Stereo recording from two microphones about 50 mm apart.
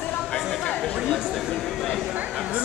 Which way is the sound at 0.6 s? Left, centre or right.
Left.